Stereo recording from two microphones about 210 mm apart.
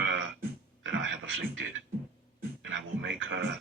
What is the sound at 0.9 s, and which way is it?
Beatboxing, 65° right (ahead or behind).